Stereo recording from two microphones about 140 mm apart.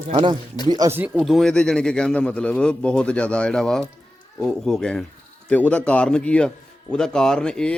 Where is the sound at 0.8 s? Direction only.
25° right (ahead or behind).